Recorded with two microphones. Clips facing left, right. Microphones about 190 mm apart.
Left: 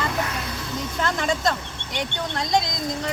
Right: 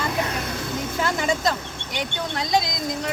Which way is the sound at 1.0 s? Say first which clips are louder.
Even; 5° right (ahead or behind).